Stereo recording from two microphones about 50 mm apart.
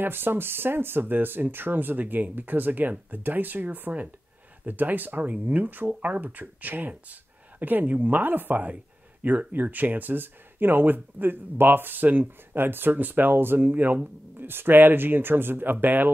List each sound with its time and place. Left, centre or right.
0.0 s speech: right